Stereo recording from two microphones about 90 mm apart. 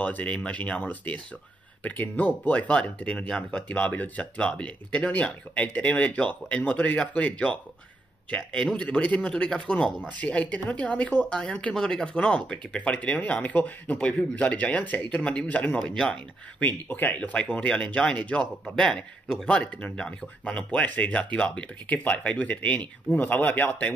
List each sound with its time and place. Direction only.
0.0 s speech: 15° left (ahead or behind)